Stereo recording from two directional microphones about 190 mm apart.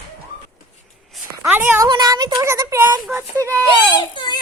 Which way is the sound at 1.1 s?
10° right (ahead or behind).